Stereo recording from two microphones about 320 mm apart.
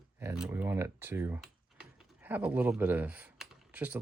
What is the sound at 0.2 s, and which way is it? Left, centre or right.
Speech, centre.